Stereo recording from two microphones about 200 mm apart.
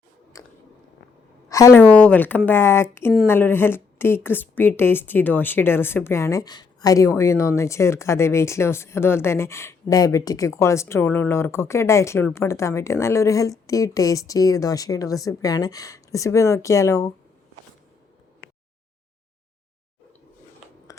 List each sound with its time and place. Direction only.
0.4 s chewing: 15° left (ahead or behind)
1.5 s a woman's voice: 15° left (ahead or behind)
20.9 s a sound: 15° left (ahead or behind)